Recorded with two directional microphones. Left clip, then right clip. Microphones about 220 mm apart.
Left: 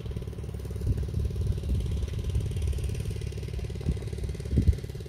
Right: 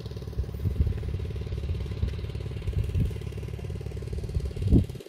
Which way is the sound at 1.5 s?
10° left (ahead or behind).